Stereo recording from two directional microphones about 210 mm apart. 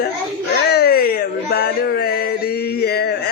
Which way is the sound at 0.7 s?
45° left (ahead or behind).